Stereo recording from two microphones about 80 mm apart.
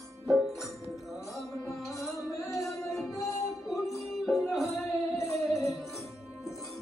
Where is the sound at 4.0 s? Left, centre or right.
Centre.